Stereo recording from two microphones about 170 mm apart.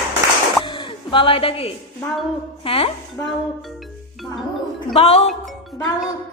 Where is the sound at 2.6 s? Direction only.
30° left (ahead or behind).